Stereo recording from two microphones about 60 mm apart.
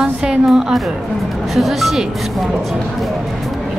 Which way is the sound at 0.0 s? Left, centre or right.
Centre.